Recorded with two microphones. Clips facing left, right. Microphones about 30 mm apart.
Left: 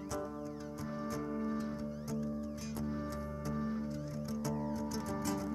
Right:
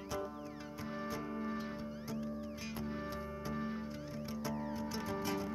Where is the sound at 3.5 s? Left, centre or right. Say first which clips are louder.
Left 4 dB; right.